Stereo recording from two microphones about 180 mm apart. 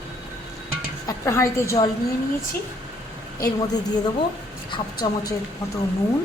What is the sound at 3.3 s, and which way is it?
A woman's voice, 20° left (ahead or behind).